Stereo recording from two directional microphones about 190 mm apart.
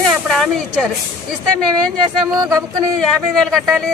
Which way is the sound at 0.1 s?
Centre (ahead or behind).